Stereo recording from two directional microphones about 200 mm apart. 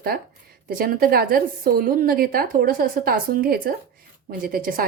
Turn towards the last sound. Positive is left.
turn(degrees=-45)  # may be behind; listen again after turning